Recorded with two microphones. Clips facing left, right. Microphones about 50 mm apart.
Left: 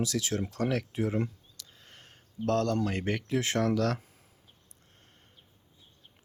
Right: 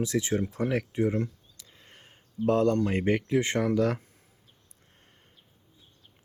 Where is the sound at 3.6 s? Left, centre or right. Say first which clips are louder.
Right 2 dB; centre.